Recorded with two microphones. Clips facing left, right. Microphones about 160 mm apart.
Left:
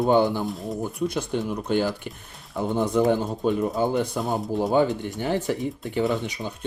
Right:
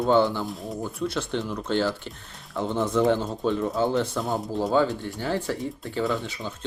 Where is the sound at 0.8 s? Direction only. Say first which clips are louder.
Left 1 dB; 10° left (ahead or behind).